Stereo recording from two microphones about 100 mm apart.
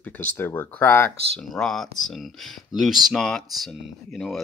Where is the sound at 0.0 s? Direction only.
15° left (ahead or behind).